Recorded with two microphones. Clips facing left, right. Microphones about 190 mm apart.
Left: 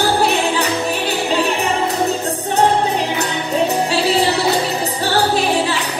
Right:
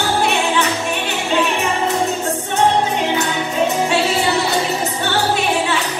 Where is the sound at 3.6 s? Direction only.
35° left (ahead or behind).